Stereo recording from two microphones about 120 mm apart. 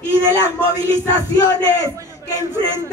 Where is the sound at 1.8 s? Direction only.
20° right (ahead or behind).